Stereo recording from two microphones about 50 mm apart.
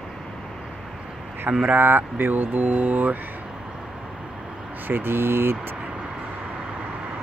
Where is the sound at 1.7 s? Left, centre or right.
Right.